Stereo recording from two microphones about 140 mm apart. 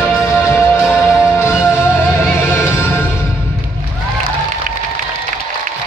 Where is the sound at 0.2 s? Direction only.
20° left (ahead or behind).